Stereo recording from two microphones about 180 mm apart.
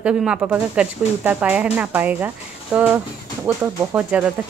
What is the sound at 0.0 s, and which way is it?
A woman's voice, 5° right (ahead or behind).